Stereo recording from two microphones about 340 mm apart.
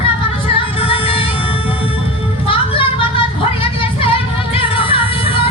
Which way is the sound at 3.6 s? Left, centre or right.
Centre.